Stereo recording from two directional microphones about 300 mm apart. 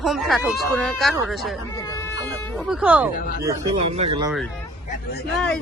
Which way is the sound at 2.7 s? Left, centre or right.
Centre.